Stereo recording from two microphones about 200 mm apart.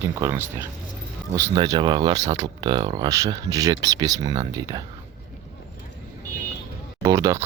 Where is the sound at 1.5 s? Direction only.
20° right (ahead or behind).